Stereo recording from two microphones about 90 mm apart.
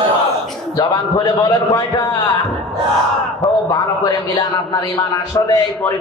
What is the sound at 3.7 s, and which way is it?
A man's voice, 50° left (ahead or behind).